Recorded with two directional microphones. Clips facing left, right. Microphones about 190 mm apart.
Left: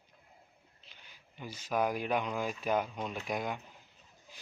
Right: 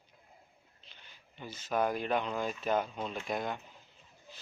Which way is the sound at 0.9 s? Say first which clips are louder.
Right 1 dB; 10° left (ahead or behind).